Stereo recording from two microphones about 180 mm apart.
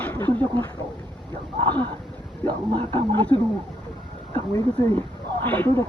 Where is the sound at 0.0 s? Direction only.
10° left (ahead or behind).